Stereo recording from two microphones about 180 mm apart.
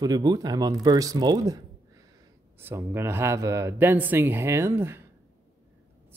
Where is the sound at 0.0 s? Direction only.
20° right (ahead or behind).